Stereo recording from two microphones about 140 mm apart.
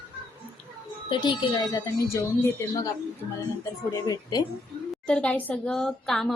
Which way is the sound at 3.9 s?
25° left (ahead or behind).